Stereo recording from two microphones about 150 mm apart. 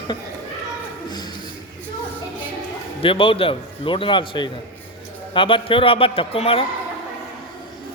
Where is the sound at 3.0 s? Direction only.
35° left (ahead or behind).